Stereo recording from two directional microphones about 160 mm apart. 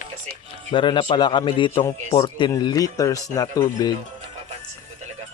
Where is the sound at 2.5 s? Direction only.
25° left (ahead or behind).